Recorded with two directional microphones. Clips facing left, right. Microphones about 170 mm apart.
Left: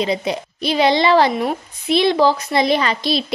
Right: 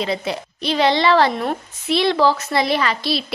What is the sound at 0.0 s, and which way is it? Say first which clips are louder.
A woman's voice: left 3 dB; 15° left (ahead or behind).